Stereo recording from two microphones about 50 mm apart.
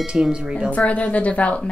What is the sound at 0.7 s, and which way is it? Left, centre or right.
Speech, left.